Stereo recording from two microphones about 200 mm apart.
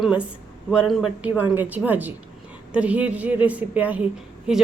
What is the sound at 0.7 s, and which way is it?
A woman's voice, 5° right (ahead or behind).